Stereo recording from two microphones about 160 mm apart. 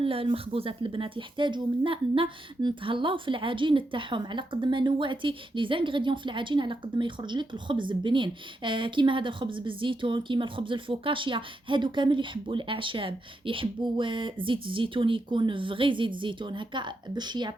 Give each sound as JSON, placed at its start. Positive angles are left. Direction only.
{"t": 0.0, "sound": "a woman's voice", "side_deg": -35}